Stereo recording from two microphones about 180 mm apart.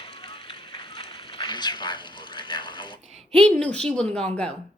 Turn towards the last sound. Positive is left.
turn(degrees=5)  # may be behind; listen again after turning